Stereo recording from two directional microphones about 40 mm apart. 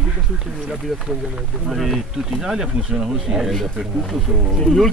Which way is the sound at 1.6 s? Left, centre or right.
Centre.